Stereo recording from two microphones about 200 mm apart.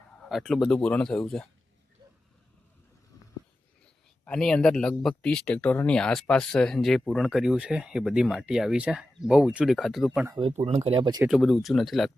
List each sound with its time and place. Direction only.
0.3 s speech: centre (ahead or behind)
4.3 s speech: 5° left (ahead or behind)
10.2 s speech: 25° right (ahead or behind)
10.5 s speech: 35° right (ahead or behind)
11.2 s speech: centre (ahead or behind)